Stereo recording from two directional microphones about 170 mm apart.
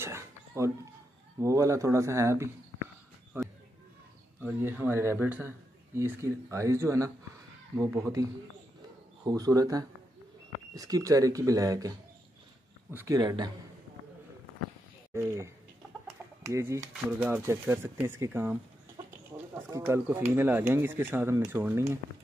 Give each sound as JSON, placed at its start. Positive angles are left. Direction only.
{"t": 0.0, "sound": "a sound", "side_deg": -15}
{"t": 1.4, "sound": "speech", "side_deg": -20}
{"t": 3.3, "sound": "a sound", "side_deg": -15}
{"t": 4.4, "sound": "speech", "side_deg": -10}
{"t": 12.9, "sound": "speech", "side_deg": -20}
{"t": 15.1, "sound": "speech", "side_deg": -15}
{"t": 16.1, "sound": "chicken", "side_deg": -15}
{"t": 17.2, "sound": "speech", "side_deg": -15}